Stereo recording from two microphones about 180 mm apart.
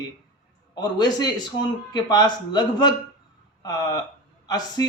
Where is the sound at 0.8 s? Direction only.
25° left (ahead or behind).